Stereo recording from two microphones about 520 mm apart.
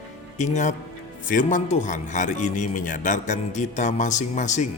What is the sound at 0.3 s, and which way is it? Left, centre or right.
Speech, centre.